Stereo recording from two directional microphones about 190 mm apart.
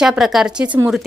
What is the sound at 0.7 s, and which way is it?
Speech, 25° right (ahead or behind).